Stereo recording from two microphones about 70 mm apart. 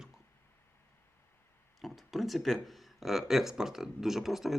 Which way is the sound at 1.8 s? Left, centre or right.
Centre.